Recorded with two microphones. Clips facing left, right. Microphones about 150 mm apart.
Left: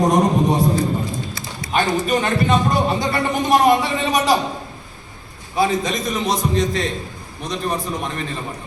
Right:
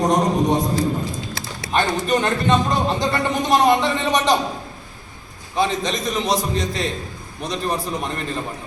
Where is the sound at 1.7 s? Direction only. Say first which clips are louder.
Left 1 dB; 5° left (ahead or behind).